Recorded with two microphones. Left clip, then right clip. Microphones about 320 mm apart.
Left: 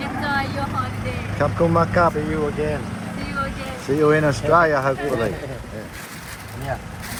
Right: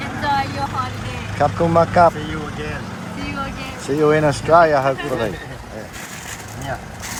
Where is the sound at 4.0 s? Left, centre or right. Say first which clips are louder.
Right 2 dB; centre.